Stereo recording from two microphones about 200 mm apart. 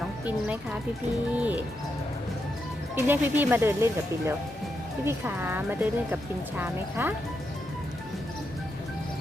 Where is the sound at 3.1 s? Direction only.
10° right (ahead or behind).